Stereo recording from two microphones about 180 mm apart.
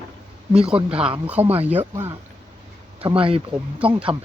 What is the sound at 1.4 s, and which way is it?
Speech, 35° right (ahead or behind).